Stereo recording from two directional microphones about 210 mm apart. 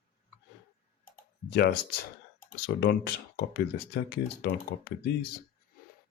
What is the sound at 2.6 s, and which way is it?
Speech, 50° left (ahead or behind).